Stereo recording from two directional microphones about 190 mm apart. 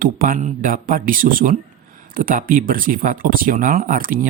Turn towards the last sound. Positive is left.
turn(degrees=-45)  # may be behind; listen again after turning